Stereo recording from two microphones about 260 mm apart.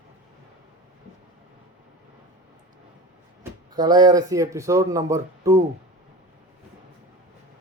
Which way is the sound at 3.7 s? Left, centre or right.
Centre.